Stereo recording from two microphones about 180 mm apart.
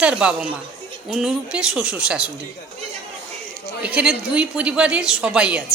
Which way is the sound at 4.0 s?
5° right (ahead or behind).